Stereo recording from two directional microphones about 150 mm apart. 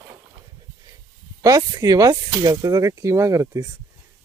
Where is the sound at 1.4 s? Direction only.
25° right (ahead or behind).